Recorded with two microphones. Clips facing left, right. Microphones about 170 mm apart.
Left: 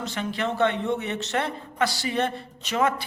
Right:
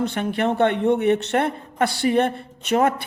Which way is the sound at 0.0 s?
55° right (ahead or behind).